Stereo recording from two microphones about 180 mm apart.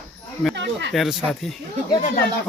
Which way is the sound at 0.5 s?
75° right (ahead or behind).